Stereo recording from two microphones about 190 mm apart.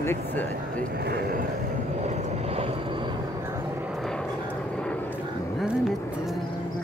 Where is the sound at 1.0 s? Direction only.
55° right (ahead or behind).